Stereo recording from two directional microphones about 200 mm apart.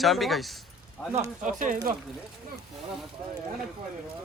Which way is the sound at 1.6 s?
45° right (ahead or behind).